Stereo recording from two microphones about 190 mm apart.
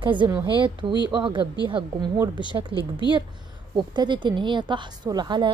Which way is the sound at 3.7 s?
25° right (ahead or behind).